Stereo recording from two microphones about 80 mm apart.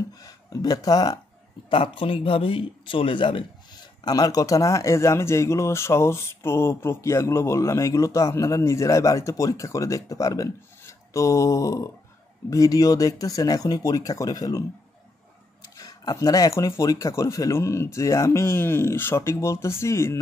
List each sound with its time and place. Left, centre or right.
0.2 s speech: left
1.7 s speech: left
4.0 s speech: left
15.8 s speech: left